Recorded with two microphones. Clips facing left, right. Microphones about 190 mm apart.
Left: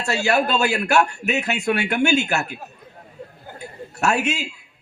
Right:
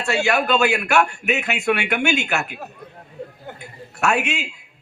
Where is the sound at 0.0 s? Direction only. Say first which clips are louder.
Even; 40° left (ahead or behind).